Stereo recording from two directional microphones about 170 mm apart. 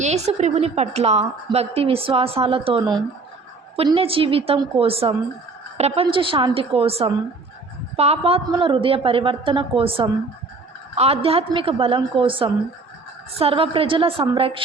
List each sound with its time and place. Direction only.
0.0 s a woman's voice: 40° right (ahead or behind)